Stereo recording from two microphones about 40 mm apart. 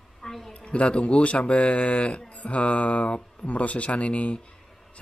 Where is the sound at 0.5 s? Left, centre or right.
Left.